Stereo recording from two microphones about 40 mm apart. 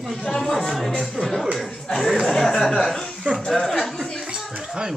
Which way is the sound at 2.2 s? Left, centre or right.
Centre.